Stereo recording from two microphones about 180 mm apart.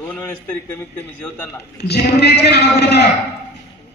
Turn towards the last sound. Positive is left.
turn(degrees=65)  # may be behind; listen again after turning